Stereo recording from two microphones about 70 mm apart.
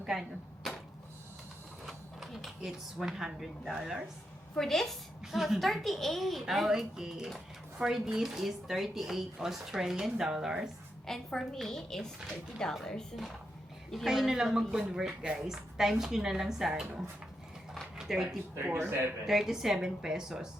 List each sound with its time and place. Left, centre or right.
0.0 s a sound: centre
1.8 s speech: centre
4.5 s a child's voice: centre
11.0 s a child's voice: centre
13.9 s speech: centre
17.9 s a sound: centre
18.6 s speech: right
19.2 s speech: centre